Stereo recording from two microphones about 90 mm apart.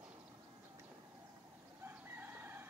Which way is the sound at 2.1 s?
20° right (ahead or behind).